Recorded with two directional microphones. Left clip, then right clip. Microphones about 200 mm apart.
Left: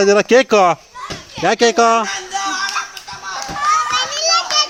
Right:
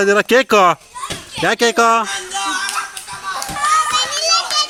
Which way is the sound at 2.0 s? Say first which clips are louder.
Left 1 dB; 30° left (ahead or behind).